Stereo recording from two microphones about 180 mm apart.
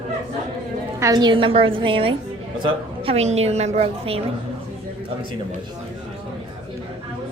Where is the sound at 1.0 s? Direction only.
20° right (ahead or behind).